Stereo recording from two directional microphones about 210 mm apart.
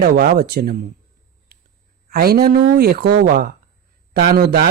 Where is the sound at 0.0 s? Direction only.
45° right (ahead or behind).